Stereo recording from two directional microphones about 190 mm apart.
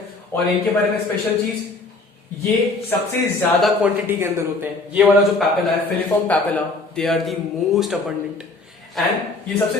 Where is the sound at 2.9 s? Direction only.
10° left (ahead or behind).